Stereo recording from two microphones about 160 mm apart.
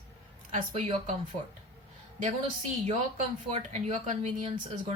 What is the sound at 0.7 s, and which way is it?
Speech, 35° right (ahead or behind).